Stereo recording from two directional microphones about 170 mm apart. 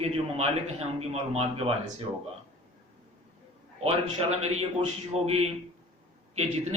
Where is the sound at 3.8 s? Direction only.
40° right (ahead or behind).